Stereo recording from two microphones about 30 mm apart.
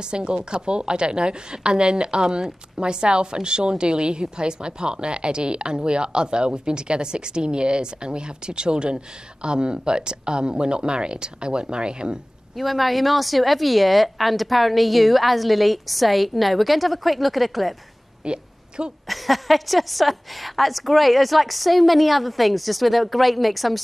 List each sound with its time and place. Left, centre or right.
0.1 s a woman's voice: right
12.5 s a woman's voice: centre
18.2 s a sound: right
19.0 s a woman's voice: centre